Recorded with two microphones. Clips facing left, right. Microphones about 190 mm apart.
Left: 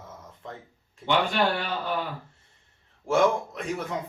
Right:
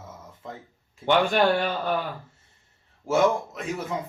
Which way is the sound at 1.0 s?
50° right (ahead or behind).